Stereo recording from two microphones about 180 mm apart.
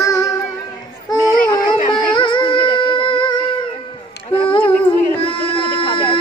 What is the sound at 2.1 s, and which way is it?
Music, 25° left (ahead or behind).